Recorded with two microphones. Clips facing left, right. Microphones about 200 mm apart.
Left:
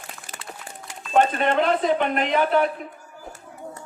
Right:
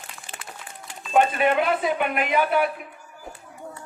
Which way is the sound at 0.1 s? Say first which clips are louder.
Left 3 dB; 45° left (ahead or behind).